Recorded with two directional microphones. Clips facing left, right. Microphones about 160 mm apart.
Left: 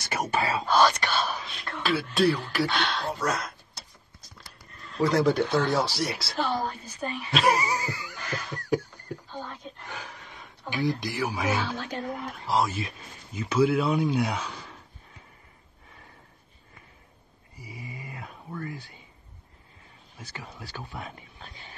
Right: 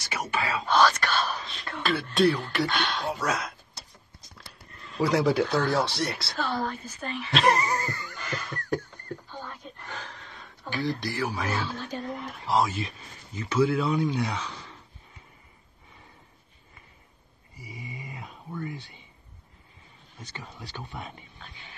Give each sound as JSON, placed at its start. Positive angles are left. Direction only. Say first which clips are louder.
{"t": 0.0, "sound": "speech", "louder": "left 3 dB", "side_deg": 45}
{"t": 0.8, "sound": "whispering", "louder": "even", "side_deg": 15}
{"t": 4.9, "sound": "speech", "louder": "left 1 dB", "side_deg": -5}
{"t": 6.3, "sound": "a sound", "louder": "left 3 dB", "side_deg": 15}
{"t": 11.6, "sound": "a woman's voice", "louder": "left 1 dB", "side_deg": 80}
{"t": 12.2, "sound": "speech", "louder": "right 1 dB", "side_deg": 0}
{"t": 17.8, "sound": "a sound", "louder": "even", "side_deg": 0}
{"t": 20.2, "sound": "speech", "louder": "even", "side_deg": 5}
{"t": 21.4, "sound": "a sound", "louder": "left 2 dB", "side_deg": 40}